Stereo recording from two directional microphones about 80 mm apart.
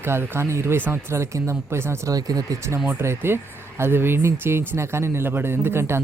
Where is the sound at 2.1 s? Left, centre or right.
Right.